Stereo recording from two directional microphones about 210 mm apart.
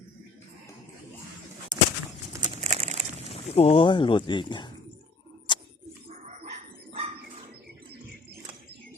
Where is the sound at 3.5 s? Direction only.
30° left (ahead or behind).